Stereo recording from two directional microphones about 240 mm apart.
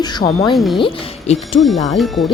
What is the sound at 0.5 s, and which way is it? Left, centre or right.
Speech, centre.